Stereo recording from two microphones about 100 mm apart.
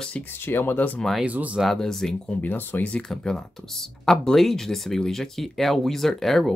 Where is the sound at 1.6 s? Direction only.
5° left (ahead or behind).